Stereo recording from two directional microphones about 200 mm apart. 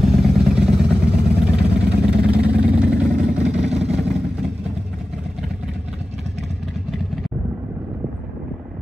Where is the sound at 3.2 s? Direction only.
35° right (ahead or behind).